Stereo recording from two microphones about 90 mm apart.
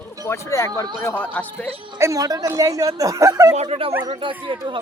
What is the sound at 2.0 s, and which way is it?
Speech, 40° right (ahead or behind).